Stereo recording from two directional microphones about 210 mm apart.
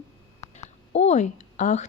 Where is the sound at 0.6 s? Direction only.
30° left (ahead or behind).